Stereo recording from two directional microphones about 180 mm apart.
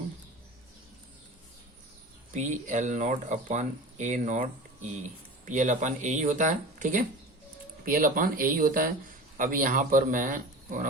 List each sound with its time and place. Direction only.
2.3 s speech: 45° right (ahead or behind)